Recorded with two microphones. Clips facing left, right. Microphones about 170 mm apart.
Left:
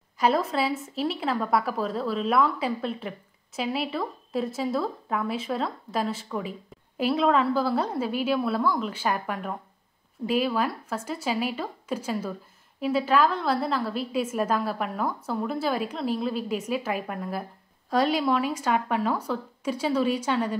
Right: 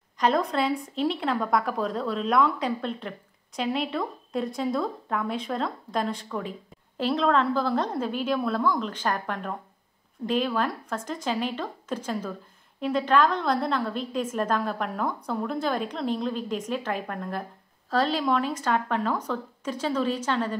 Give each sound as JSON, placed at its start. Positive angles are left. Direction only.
{"t": 0.2, "sound": "a woman's voice", "side_deg": 5}